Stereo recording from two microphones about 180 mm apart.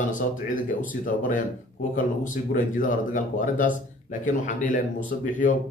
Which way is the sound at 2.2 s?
45° left (ahead or behind).